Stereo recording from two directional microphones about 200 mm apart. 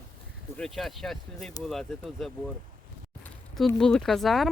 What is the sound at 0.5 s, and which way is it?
Speech, centre (ahead or behind).